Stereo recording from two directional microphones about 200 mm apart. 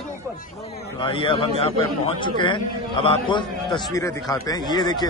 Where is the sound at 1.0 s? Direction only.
25° left (ahead or behind).